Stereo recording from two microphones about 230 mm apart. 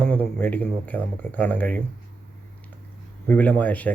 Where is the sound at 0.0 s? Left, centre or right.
Centre.